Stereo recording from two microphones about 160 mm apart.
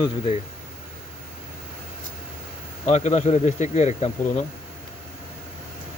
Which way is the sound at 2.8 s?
45° left (ahead or behind).